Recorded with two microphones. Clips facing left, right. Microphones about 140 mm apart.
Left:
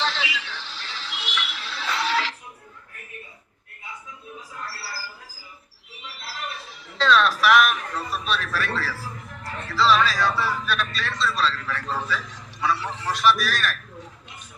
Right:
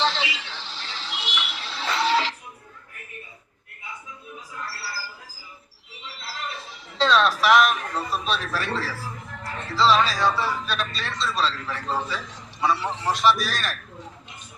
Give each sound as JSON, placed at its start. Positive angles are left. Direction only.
{"t": 0.0, "sound": "music", "side_deg": -25}
{"t": 6.2, "sound": "music", "side_deg": -20}
{"t": 9.4, "sound": "speech", "side_deg": -25}